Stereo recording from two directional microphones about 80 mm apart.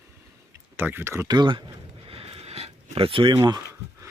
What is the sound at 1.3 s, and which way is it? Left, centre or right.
Speech, right.